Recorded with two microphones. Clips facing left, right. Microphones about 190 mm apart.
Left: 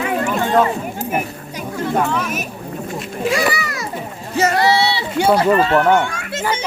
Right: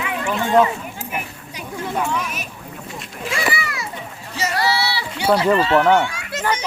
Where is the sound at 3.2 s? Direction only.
40° left (ahead or behind).